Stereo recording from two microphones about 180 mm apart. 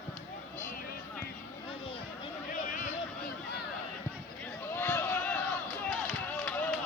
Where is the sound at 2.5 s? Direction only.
50° left (ahead or behind).